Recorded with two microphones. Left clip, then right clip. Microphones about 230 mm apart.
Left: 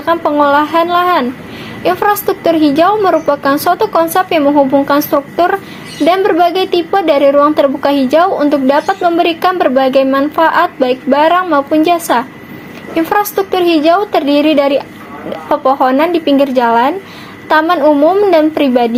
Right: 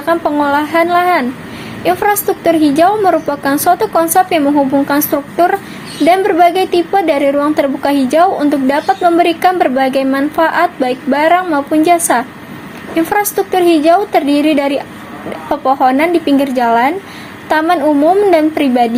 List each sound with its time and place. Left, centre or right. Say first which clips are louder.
0.0 s a woman's voice: left 2 dB; left